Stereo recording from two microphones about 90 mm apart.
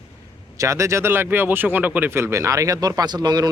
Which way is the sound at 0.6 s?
35° right (ahead or behind).